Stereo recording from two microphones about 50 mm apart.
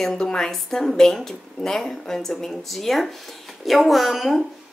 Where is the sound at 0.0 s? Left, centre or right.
Centre.